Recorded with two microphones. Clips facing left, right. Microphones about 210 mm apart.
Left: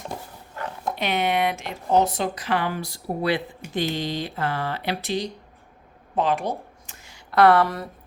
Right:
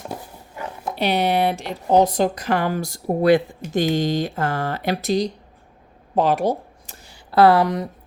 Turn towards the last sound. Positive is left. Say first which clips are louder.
# right 5 dB
turn(degrees=-20)  # may be behind; listen again after turning